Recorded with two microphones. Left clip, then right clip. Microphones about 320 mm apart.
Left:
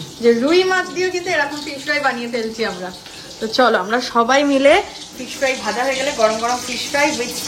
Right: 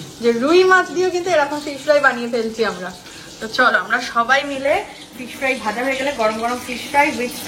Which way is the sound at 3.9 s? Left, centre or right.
Centre.